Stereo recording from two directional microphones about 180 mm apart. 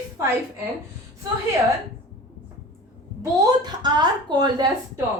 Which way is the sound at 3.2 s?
20° right (ahead or behind).